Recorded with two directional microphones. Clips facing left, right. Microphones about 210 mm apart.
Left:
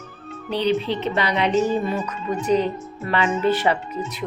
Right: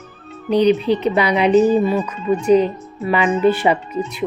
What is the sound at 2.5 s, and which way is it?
Speech, 10° right (ahead or behind).